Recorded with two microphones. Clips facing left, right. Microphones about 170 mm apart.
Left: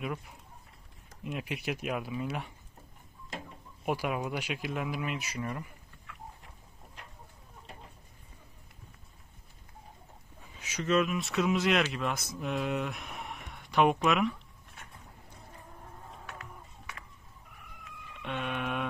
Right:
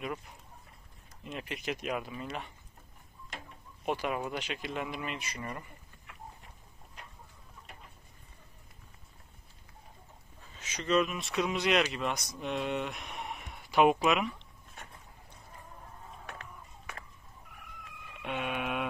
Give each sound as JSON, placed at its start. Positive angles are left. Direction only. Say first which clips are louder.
{"t": 1.2, "sound": "speech", "louder": "left 2 dB", "side_deg": 10}
{"t": 3.8, "sound": "speech", "louder": "left 1 dB", "side_deg": 10}
{"t": 10.5, "sound": "speech", "louder": "left 1 dB", "side_deg": 10}
{"t": 16.3, "sound": "music", "louder": "left 1 dB", "side_deg": -35}
{"t": 18.2, "sound": "a sound", "louder": "even", "side_deg": -5}